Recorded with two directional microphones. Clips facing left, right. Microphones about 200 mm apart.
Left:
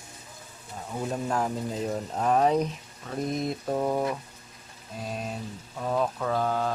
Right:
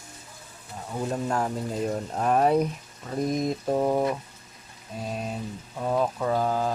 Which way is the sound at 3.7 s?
15° right (ahead or behind).